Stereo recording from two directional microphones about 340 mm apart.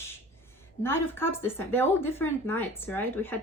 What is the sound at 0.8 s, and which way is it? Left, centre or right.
Speech, centre.